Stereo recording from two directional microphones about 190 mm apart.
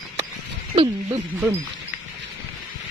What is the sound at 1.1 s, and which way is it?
Speech, 15° right (ahead or behind).